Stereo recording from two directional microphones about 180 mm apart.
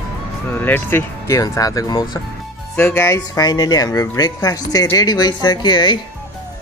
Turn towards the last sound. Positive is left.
turn(degrees=25)  # may be behind; listen again after turning